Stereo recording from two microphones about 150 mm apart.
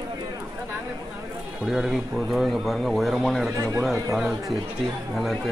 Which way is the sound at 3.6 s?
20° right (ahead or behind).